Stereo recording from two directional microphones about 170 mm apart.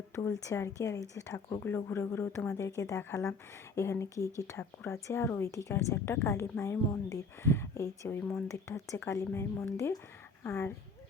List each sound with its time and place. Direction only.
0.3 s a woman's voice: 20° left (ahead or behind)